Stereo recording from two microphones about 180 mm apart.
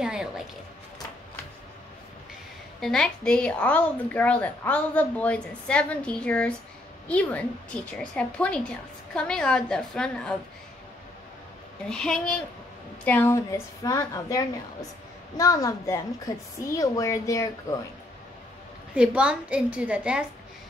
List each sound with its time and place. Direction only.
0.0 s music: 5° right (ahead or behind)
2.8 s a woman's voice: 5° left (ahead or behind)
11.9 s a woman's voice: 5° left (ahead or behind)
18.9 s a woman's voice: 5° right (ahead or behind)